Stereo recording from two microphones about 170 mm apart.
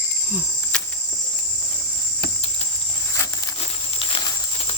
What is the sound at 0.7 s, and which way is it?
Cricket, 5° left (ahead or behind).